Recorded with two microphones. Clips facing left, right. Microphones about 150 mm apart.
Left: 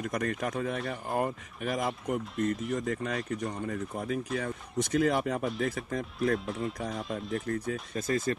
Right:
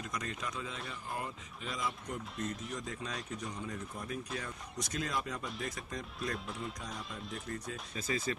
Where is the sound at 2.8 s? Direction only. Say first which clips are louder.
Left 9 dB; 65° left (ahead or behind).